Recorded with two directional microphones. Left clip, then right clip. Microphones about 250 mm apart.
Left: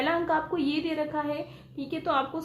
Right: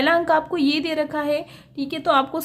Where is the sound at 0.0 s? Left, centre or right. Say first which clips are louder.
Right 8 dB; right.